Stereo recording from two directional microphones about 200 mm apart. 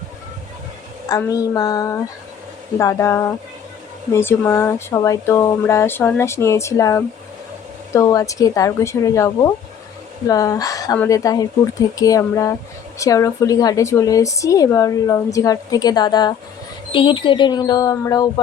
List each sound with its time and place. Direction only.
1.0 s speech: 15° left (ahead or behind)